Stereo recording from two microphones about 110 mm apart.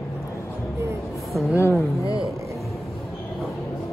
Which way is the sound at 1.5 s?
25° left (ahead or behind).